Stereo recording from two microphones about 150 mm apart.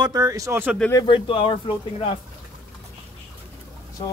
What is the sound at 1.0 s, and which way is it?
Speech, 35° left (ahead or behind).